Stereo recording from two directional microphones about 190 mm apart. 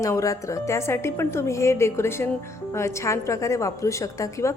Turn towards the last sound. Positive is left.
turn(degrees=15)  # may be behind; listen again after turning